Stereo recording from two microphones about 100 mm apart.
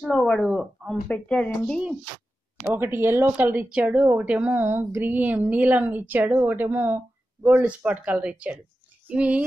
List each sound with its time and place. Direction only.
0.0 s speech: 10° left (ahead or behind)
2.6 s a woman's voice: 20° right (ahead or behind)